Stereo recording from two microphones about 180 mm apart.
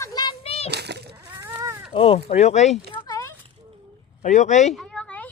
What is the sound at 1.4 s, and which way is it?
Livestock, 15° right (ahead or behind).